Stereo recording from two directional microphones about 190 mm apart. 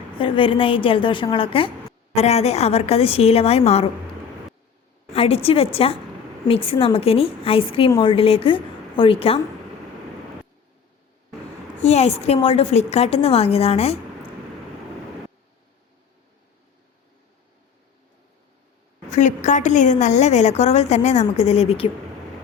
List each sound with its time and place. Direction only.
0.2 s a woman's voice: 25° left (ahead or behind)
5.1 s a woman's voice: 30° left (ahead or behind)
11.8 s a woman's voice: 35° left (ahead or behind)
19.1 s a woman's voice: 40° left (ahead or behind)